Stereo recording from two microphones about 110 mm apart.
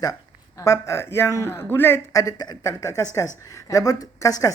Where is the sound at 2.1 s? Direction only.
35° left (ahead or behind).